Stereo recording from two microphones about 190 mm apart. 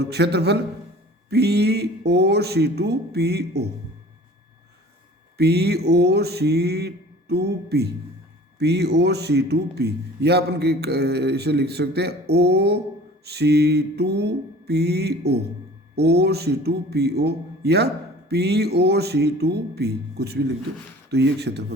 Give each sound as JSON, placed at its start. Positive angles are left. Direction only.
{"t": 0.1, "sound": "a man's voice", "side_deg": -60}
{"t": 5.4, "sound": "a man's voice", "side_deg": -60}